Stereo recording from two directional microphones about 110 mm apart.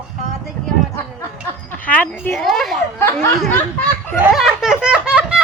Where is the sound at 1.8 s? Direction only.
10° left (ahead or behind).